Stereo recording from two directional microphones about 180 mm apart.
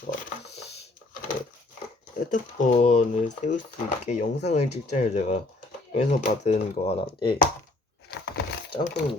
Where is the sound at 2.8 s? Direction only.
45° left (ahead or behind).